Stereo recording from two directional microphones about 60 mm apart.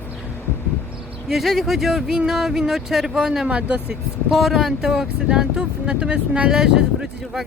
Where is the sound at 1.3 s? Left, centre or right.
Centre.